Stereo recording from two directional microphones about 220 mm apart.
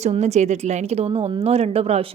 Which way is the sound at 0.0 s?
30° right (ahead or behind).